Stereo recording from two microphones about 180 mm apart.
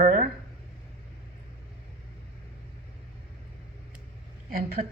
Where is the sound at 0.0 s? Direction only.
50° right (ahead or behind).